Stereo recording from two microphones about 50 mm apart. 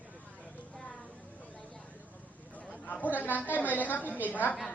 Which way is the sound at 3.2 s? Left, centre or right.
Left.